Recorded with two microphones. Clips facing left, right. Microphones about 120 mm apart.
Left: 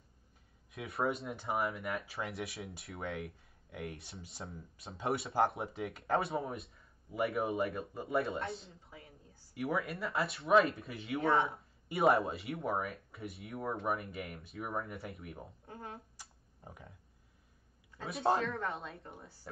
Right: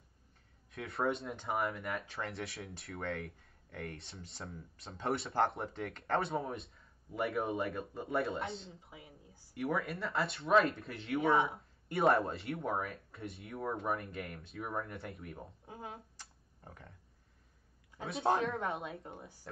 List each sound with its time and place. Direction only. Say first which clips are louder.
0.7 s speech: even; centre (ahead or behind)
8.9 s a woman's voice: left 3 dB; 15° right (ahead or behind)
9.5 s speech: even; centre (ahead or behind)
15.6 s speech: even; 15° right (ahead or behind)
16.2 s a sound: even; 10° left (ahead or behind)
18.0 s speech: even; centre (ahead or behind)
18.7 s a woman's voice: right 2 dB; 25° right (ahead or behind)